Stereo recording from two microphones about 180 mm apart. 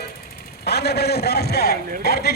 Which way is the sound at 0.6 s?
65° left (ahead or behind).